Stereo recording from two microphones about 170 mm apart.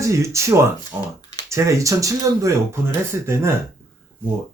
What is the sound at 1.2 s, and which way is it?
Typing, 25° left (ahead or behind).